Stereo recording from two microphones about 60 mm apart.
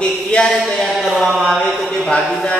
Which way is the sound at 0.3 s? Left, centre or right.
Centre.